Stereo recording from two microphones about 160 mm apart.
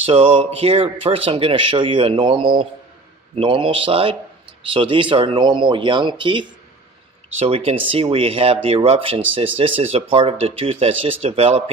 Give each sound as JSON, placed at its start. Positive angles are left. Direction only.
{"t": 0.0, "sound": "speech", "side_deg": -35}